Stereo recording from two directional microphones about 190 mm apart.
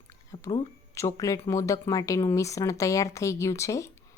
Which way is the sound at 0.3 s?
15° left (ahead or behind).